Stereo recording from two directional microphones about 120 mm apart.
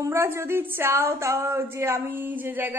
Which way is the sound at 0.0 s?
20° right (ahead or behind).